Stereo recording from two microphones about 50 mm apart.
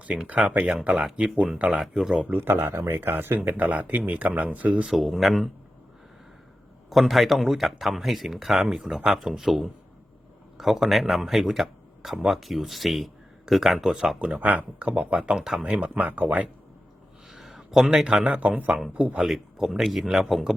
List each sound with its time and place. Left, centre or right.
0.3 s speech: right
0.7 s speech: centre
2.3 s speech: right
3.5 s speech: right
4.9 s speech: centre
7.1 s speech: centre
14.2 s speech: right
15.4 s a man's voice: centre
15.8 s speech: right
17.5 s a sound: centre
17.8 s a man's voice: centre
18.3 s speech: right
19.2 s speech: centre